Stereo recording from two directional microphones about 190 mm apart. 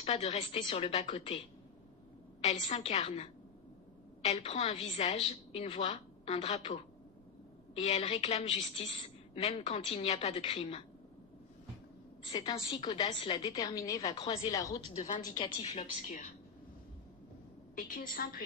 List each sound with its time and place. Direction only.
0.0 s a woman's voice: 35° left (ahead or behind)
2.4 s a woman's voice: 35° left (ahead or behind)
7.8 s a woman's voice: 35° left (ahead or behind)
12.2 s a woman's voice: 25° left (ahead or behind)
13.0 s a woman's voice: 35° left (ahead or behind)
13.4 s a woman's voice: 20° left (ahead or behind)
14.1 s a woman's voice: 30° left (ahead or behind)
14.5 s speech: 15° left (ahead or behind)
15.0 s a woman's voice: 40° left (ahead or behind)
15.3 s a woman's voice: 25° left (ahead or behind)
17.7 s a woman's voice: 45° left (ahead or behind)